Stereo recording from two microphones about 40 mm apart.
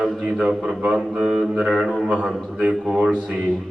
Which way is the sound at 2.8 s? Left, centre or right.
Centre.